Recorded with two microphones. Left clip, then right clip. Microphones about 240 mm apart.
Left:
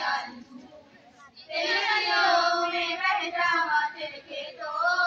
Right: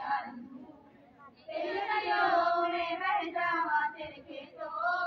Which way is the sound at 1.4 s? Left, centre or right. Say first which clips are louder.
Left 8 dB; right.